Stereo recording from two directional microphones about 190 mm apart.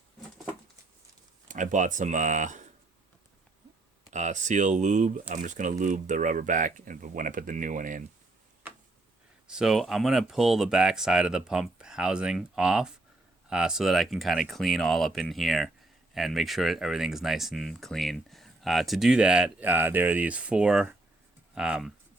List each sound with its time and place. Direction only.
1.5 s speech: 40° right (ahead or behind)
4.1 s speech: 40° right (ahead or behind)
9.5 s speech: centre (ahead or behind)